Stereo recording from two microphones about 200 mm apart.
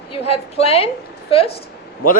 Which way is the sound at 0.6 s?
30° left (ahead or behind).